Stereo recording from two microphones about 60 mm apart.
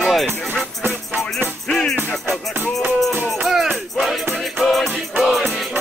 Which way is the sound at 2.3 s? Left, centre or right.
Right.